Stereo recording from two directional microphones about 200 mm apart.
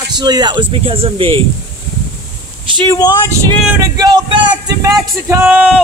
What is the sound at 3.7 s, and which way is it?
Speech, 15° right (ahead or behind).